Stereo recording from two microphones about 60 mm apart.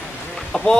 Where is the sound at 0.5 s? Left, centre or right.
Centre.